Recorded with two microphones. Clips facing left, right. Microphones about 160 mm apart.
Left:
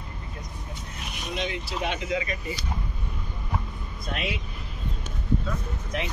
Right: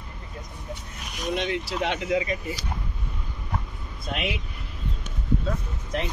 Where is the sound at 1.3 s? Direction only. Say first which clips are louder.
Right 4 dB; 60° right (ahead or behind).